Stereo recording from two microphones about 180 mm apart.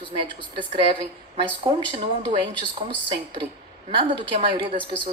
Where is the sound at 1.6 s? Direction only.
30° right (ahead or behind).